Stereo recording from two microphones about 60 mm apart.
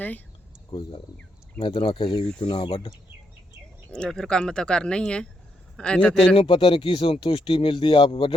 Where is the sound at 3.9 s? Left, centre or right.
Centre.